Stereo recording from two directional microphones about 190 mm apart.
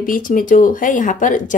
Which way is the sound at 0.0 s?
45° left (ahead or behind).